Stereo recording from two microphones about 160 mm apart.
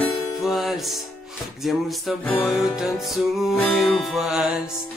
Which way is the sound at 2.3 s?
10° left (ahead or behind).